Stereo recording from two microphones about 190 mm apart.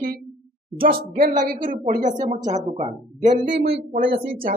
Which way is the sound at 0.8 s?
50° right (ahead or behind).